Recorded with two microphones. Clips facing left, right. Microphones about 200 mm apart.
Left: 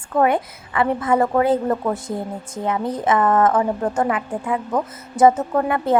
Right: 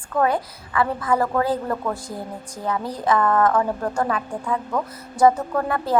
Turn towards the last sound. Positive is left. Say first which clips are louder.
# left 4 dB
turn(degrees=20)  # may be behind; listen again after turning